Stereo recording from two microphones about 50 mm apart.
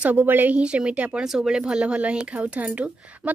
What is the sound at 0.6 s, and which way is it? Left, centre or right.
Speech, right.